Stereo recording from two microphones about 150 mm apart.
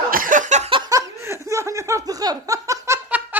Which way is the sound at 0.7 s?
35° right (ahead or behind).